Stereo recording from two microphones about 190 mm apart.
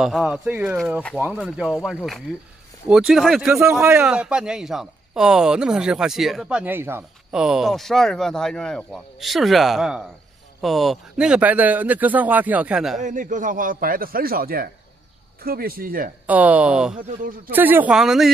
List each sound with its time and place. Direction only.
0.0 s a man's voice: centre (ahead or behind)
13.0 s a man's voice: 45° right (ahead or behind)
16.3 s speech: 10° right (ahead or behind)
16.9 s a man's voice: 45° right (ahead or behind)
17.5 s speech: 10° right (ahead or behind)